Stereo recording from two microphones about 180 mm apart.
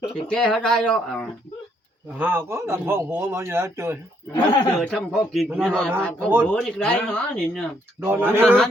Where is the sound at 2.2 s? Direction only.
10° right (ahead or behind).